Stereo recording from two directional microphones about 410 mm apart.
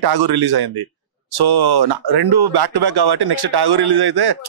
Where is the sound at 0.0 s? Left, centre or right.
Right.